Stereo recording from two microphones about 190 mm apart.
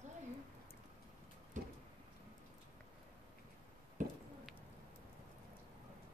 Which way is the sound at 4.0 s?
40° right (ahead or behind).